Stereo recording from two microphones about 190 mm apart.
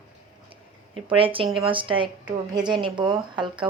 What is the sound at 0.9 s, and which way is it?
Speech, 30° right (ahead or behind).